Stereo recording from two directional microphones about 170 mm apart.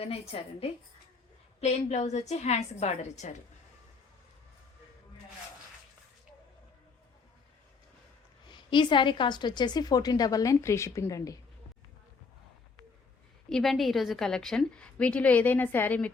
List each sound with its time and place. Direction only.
0.0 s a woman's voice: 35° left (ahead or behind)
1.6 s a woman's voice: 40° left (ahead or behind)
8.4 s a woman's voice: 25° left (ahead or behind)
13.5 s a woman's voice: centre (ahead or behind)